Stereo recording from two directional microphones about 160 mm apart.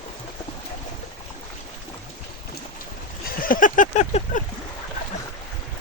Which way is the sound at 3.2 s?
60° left (ahead or behind).